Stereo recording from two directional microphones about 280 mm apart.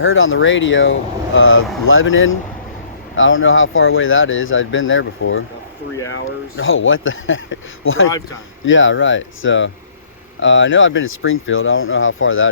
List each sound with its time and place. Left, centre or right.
0.0 s speech: left